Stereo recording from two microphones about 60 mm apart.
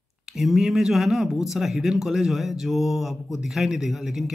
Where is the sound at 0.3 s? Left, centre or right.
Centre.